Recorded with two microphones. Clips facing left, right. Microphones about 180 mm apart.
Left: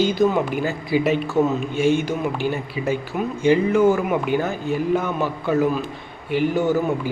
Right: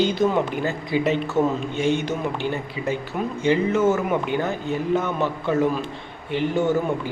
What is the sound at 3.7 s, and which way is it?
Speech, 10° left (ahead or behind).